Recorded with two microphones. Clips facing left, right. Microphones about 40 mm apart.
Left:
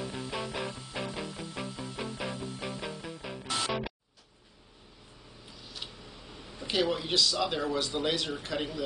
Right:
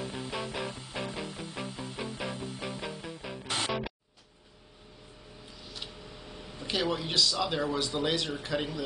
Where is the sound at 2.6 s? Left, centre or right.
Centre.